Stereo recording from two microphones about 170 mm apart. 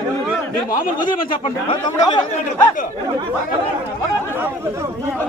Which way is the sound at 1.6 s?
25° left (ahead or behind).